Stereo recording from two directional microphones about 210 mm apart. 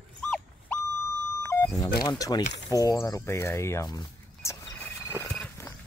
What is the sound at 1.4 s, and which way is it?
Beep, 15° left (ahead or behind).